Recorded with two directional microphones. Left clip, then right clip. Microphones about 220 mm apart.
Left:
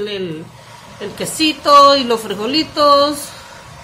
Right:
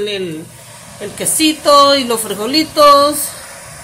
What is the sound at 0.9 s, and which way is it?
A woman's voice, 5° right (ahead or behind).